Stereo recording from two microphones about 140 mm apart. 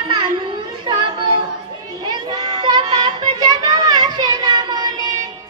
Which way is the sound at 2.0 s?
30° right (ahead or behind).